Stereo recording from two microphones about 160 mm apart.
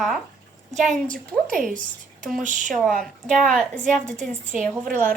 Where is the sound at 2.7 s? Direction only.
Centre (ahead or behind).